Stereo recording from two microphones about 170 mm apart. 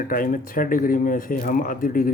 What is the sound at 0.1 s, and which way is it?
Speech, 55° left (ahead or behind).